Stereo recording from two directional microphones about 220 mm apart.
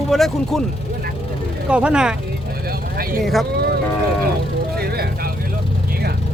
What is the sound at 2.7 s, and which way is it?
Vehicle, 45° right (ahead or behind).